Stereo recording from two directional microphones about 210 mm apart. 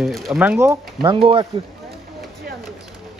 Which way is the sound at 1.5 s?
25° right (ahead or behind).